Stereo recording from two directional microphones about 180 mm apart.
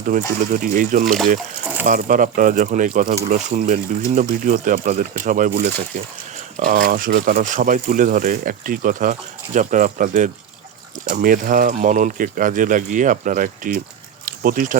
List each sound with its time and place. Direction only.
0.1 s speech: 45° right (ahead or behind)
1.0 s speech: centre (ahead or behind)
1.8 s speech: 50° right (ahead or behind)